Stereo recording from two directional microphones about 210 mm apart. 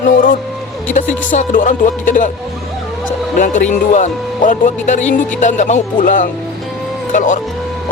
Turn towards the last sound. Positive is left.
turn(degrees=35)  # may be behind; listen again after turning